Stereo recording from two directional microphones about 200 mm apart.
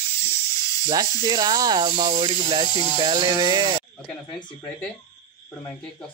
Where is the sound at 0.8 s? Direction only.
20° right (ahead or behind).